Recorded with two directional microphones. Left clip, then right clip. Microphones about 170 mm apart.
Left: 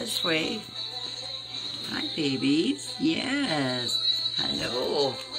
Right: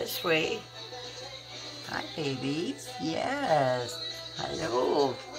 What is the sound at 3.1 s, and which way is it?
Speech, 15° right (ahead or behind).